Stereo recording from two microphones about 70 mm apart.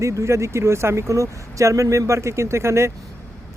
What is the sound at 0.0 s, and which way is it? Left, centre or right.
Speech, right.